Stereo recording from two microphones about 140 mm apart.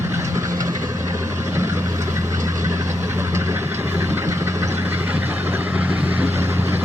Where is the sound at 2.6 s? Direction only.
20° right (ahead or behind).